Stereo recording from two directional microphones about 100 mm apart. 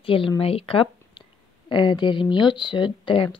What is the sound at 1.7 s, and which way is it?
Speech, 50° left (ahead or behind).